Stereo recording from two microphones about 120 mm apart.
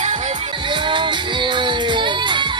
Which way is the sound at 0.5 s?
40° right (ahead or behind).